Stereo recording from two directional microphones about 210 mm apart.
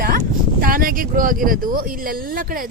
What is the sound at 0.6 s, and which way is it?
Speech, 45° right (ahead or behind).